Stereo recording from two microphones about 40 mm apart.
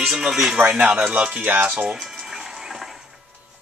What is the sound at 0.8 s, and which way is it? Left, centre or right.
Speech, right.